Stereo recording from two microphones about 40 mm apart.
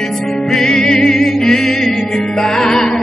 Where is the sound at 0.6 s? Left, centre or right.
Centre.